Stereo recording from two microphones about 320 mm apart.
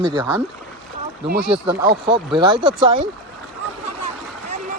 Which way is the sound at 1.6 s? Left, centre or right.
Centre.